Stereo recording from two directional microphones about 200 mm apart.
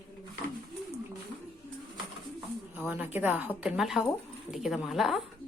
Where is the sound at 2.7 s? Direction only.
10° right (ahead or behind).